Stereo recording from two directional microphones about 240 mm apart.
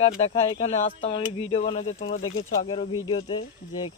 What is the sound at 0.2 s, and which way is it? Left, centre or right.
Speech, left.